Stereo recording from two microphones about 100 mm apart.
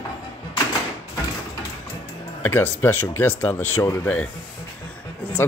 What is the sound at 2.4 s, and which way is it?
Speech, 20° left (ahead or behind).